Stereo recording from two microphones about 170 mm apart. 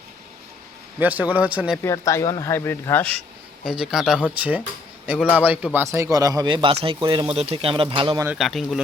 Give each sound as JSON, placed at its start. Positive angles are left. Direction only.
{"t": 0.9, "sound": "speech", "side_deg": -10}
{"t": 1.8, "sound": "speech", "side_deg": 15}
{"t": 3.7, "sound": "a man's voice", "side_deg": -5}
{"t": 8.4, "sound": "speech", "side_deg": 0}